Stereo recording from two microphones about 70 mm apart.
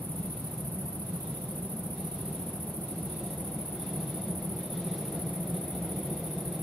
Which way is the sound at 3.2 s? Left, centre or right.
Centre.